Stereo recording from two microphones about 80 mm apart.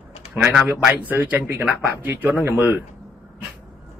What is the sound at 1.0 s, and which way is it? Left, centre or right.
Speech, right.